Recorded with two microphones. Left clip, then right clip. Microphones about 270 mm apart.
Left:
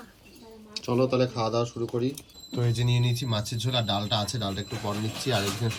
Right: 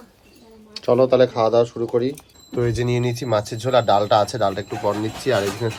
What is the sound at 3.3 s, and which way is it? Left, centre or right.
A woman's voice, centre.